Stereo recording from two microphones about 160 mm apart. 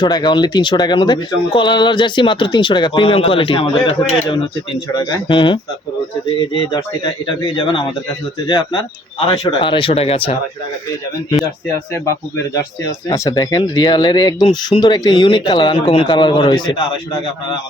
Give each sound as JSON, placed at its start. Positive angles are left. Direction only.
{"t": 0.0, "sound": "speech", "side_deg": 25}
{"t": 6.7, "sound": "speech", "side_deg": 25}
{"t": 13.1, "sound": "speech", "side_deg": 20}